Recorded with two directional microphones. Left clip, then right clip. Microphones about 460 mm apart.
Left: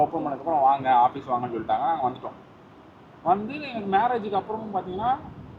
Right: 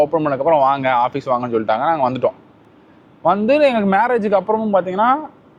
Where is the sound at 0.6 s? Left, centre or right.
Right.